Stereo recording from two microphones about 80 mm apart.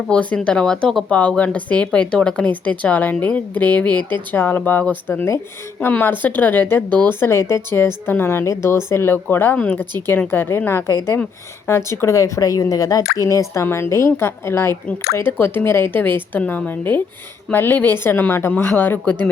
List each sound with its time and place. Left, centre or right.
0.1 s a woman's voice: centre